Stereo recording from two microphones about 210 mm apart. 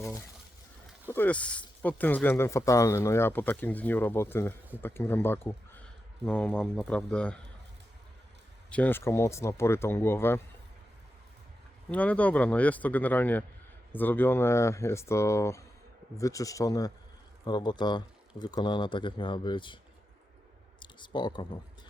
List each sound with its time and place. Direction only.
1.0 s a man's voice: 10° left (ahead or behind)
8.7 s speech: 10° left (ahead or behind)
11.9 s speech: 5° left (ahead or behind); by 19.8 s 20° left (ahead or behind)
20.7 s clicking: 20° left (ahead or behind)